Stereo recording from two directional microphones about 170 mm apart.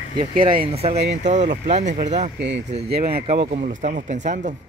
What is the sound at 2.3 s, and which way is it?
Speech, 90° right.